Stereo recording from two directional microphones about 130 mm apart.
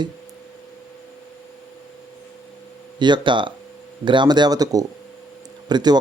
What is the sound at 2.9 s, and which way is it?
Speech, 35° right (ahead or behind).